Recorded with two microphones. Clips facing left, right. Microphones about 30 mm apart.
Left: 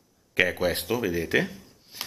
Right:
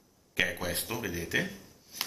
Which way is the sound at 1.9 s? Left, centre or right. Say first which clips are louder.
Even; left.